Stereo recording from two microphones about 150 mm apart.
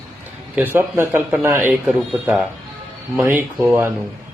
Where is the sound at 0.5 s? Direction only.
15° right (ahead or behind).